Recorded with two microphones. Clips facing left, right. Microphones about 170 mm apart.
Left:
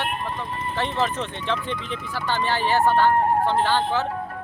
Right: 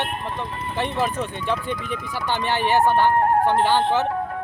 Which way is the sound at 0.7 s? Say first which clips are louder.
Right 1 dB; 15° right (ahead or behind).